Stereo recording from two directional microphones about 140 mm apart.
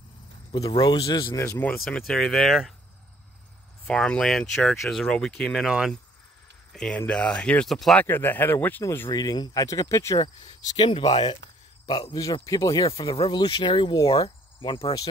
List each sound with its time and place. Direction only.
0.6 s speech: 30° left (ahead or behind)
1.1 s speech: 25° left (ahead or behind); by 2.7 s centre (ahead or behind)
3.8 s speech: 5° left (ahead or behind)
5.7 s speech: 5° right (ahead or behind)
6.7 s speech: 5° left (ahead or behind)
8.0 s speech: 15° left (ahead or behind)
9.1 s speech: 30° left (ahead or behind)
10.2 s speech: 35° left (ahead or behind)
12.4 s speech: 25° left (ahead or behind)
14.2 s cricket: 35° left (ahead or behind)